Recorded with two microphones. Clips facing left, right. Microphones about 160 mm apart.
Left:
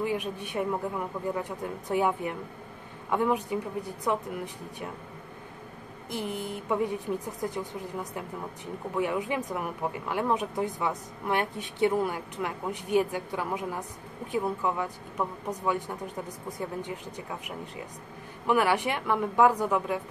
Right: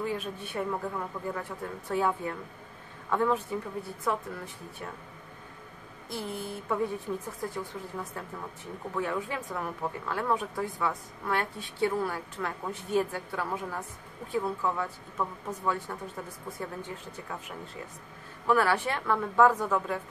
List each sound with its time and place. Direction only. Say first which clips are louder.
0.0 s speech: left 3 dB; 15° left (ahead or behind)
6.0 s speech: left 2 dB; 20° left (ahead or behind)
18.5 s speech: left 1 dB; 15° left (ahead or behind)